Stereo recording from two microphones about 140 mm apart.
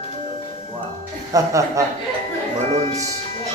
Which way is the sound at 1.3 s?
20° right (ahead or behind).